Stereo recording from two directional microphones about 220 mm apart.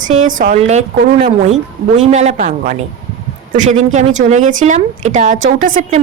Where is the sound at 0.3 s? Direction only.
35° right (ahead or behind).